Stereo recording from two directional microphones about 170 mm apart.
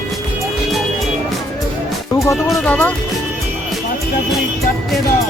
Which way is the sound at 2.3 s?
Centre (ahead or behind).